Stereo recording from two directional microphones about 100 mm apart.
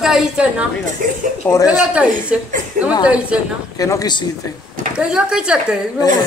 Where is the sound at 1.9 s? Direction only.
10° right (ahead or behind).